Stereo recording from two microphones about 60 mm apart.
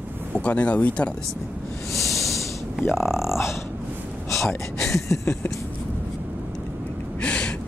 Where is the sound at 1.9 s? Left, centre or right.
Centre.